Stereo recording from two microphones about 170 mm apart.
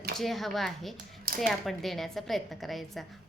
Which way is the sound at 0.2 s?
Centre (ahead or behind).